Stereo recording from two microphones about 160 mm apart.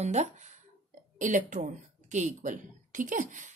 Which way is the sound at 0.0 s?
45° right (ahead or behind).